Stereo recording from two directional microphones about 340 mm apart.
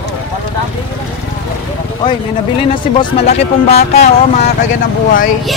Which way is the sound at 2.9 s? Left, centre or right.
Centre.